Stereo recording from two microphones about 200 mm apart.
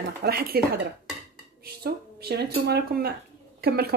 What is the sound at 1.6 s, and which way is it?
A woman's voice, 50° right (ahead or behind).